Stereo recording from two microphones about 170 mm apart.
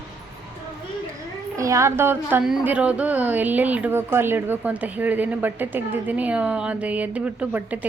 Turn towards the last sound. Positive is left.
turn(degrees=-10)  # may be behind; listen again after turning